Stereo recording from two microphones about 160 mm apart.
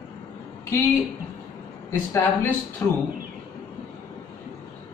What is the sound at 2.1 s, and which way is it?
Speech, 15° left (ahead or behind).